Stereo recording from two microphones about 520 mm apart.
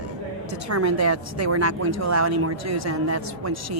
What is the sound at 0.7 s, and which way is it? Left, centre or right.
A woman's voice, right.